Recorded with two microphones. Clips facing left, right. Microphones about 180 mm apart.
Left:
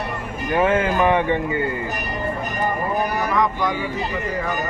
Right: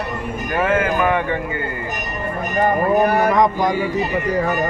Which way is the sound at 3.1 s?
60° right (ahead or behind).